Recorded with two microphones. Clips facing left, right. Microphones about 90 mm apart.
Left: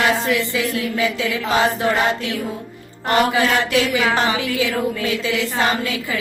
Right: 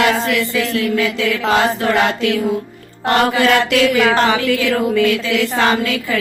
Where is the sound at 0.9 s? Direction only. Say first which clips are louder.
Right 3 dB; 15° left (ahead or behind).